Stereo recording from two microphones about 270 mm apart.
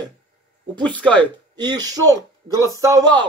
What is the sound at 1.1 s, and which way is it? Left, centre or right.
A man's voice, centre.